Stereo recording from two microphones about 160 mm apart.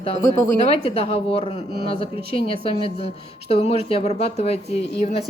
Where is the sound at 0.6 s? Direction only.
40° left (ahead or behind).